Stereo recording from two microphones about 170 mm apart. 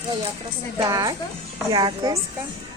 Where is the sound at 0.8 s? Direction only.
20° right (ahead or behind).